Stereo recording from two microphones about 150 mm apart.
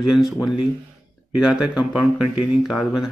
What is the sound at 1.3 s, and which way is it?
Speech, 5° right (ahead or behind).